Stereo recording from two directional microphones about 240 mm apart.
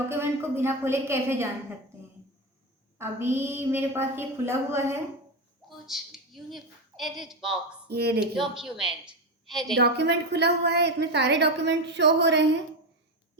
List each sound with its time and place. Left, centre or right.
0.1 s a woman's voice: centre
3.0 s a woman's voice: centre
7.9 s speech: right
8.2 s speech: centre
9.7 s a woman's voice: right